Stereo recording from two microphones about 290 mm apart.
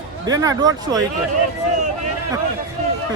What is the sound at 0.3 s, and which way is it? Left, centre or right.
Speech, centre.